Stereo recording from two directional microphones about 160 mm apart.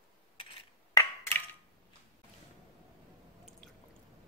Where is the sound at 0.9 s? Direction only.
15° left (ahead or behind).